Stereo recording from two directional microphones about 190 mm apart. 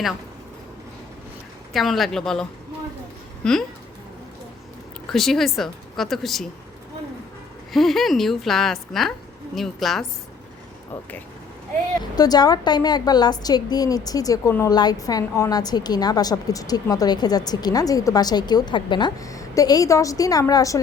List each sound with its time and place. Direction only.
1.7 s a woman's voice: centre (ahead or behind)
5.1 s a woman's voice: centre (ahead or behind)
7.7 s a woman's voice: centre (ahead or behind)
12.1 s a woman's voice: 20° left (ahead or behind)